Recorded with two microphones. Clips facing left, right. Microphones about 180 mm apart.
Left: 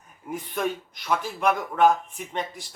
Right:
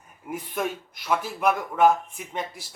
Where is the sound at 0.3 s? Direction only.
5° right (ahead or behind).